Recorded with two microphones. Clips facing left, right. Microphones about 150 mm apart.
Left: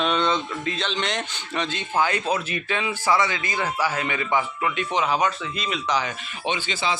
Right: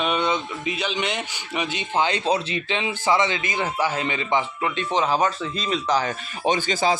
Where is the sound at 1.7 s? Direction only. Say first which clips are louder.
Right 1 dB; 20° right (ahead or behind).